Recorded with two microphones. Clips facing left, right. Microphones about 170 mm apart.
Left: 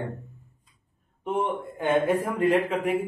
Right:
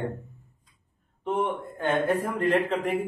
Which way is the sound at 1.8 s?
10° left (ahead or behind).